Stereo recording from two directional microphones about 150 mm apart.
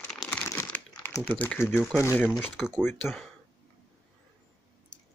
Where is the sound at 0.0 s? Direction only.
5° left (ahead or behind).